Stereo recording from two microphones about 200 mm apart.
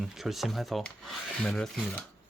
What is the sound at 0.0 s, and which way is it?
Speech, centre (ahead or behind).